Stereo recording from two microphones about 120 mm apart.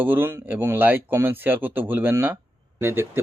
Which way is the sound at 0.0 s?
15° right (ahead or behind).